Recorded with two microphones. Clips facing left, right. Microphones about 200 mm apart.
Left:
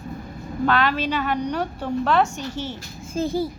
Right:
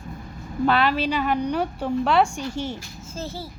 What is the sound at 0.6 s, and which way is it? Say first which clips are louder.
A woman's voice: right 1 dB; 10° right (ahead or behind).